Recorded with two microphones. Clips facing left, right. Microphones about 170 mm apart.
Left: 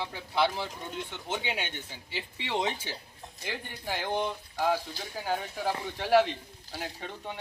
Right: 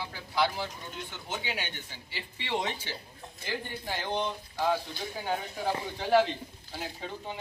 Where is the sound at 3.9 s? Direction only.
15° left (ahead or behind).